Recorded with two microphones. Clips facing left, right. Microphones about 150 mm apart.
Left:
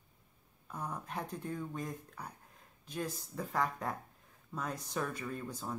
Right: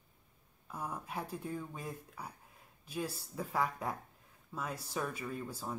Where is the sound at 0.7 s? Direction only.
5° right (ahead or behind).